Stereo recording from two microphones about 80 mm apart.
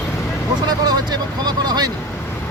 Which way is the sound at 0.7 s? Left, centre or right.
Right.